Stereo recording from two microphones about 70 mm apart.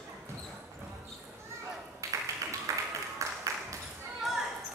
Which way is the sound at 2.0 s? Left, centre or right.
Right.